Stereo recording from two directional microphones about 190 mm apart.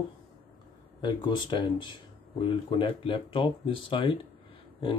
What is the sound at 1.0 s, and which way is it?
Speech, 25° left (ahead or behind).